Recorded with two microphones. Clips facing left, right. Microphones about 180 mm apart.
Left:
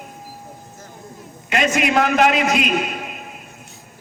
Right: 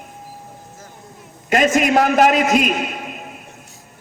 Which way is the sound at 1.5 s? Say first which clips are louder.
Right 4 dB; 45° right (ahead or behind).